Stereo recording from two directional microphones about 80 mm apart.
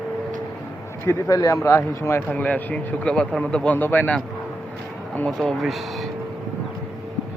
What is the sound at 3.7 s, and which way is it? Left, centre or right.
Speech, left.